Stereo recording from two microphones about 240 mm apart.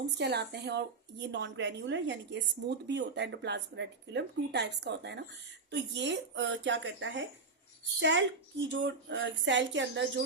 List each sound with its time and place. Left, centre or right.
0.0 s a woman's voice: right